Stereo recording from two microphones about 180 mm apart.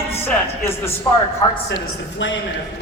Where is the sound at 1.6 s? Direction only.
90° left.